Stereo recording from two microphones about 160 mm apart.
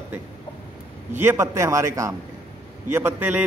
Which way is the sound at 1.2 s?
15° right (ahead or behind).